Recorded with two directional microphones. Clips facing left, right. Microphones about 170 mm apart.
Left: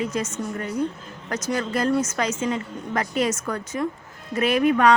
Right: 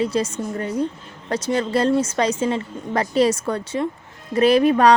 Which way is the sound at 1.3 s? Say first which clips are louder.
Right 5 dB; 30° right (ahead or behind).